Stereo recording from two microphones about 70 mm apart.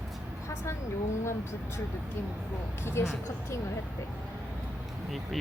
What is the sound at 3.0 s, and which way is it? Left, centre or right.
Speech, left.